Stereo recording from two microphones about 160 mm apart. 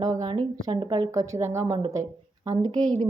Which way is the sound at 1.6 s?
30° right (ahead or behind).